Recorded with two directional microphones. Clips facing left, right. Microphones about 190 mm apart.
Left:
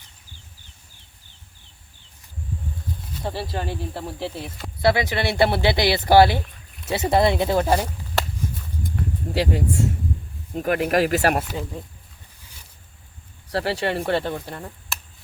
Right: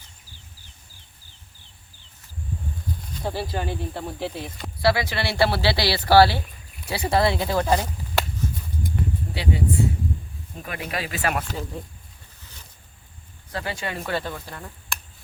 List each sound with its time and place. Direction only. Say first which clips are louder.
3.2 s speech: even; centre (ahead or behind)
4.8 s speech: left 2 dB; 20° left (ahead or behind)
9.3 s speech: left 3 dB; 45° left (ahead or behind)
10.6 s speech: left 11 dB; 55° left (ahead or behind)
13.5 s speech: left 7 dB; 35° left (ahead or behind)
14.9 s chop: right 4 dB; 5° left (ahead or behind)